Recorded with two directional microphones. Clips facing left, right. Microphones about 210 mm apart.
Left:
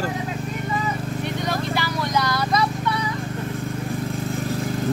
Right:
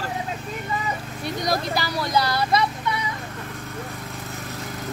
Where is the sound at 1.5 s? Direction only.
35° right (ahead or behind).